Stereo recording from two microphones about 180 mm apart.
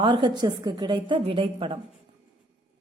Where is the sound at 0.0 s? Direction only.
25° right (ahead or behind).